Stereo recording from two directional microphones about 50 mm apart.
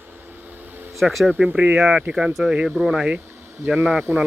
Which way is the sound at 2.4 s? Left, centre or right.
Centre.